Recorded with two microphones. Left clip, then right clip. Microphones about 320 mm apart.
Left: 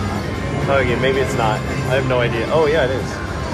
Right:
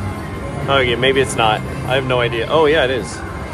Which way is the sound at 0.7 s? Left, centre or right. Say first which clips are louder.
Right 3 dB; right.